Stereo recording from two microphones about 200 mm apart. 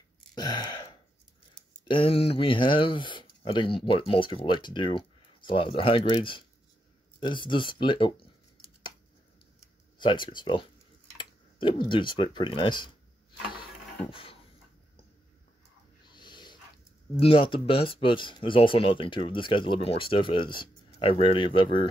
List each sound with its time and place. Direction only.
0.3 s gasp: 20° left (ahead or behind)
1.5 s speech: 25° left (ahead or behind)
9.9 s speech: 25° left (ahead or behind)
16.1 s dog: 20° left (ahead or behind)
17.2 s speech: 25° left (ahead or behind)